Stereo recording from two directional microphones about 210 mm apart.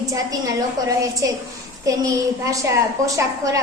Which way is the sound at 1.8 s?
15° right (ahead or behind).